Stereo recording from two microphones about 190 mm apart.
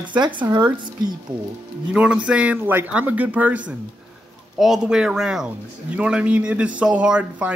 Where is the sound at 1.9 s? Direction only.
5° right (ahead or behind).